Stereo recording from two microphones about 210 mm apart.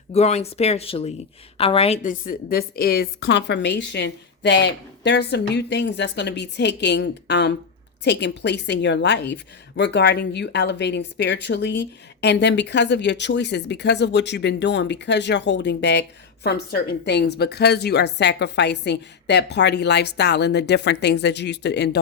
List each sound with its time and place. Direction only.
0.1 s a woman's voice: 30° left (ahead or behind); by 21.8 s 55° left (ahead or behind)